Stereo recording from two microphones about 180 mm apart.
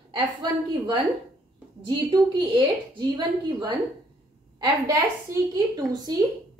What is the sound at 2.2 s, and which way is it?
A woman's voice, 25° right (ahead or behind).